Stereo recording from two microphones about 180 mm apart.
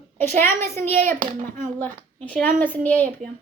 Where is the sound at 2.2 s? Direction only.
5° left (ahead or behind).